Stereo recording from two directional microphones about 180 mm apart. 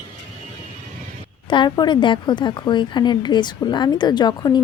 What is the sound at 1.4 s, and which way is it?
Speech, 25° left (ahead or behind).